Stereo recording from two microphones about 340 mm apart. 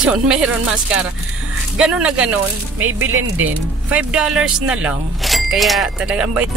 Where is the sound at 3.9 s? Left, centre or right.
Centre.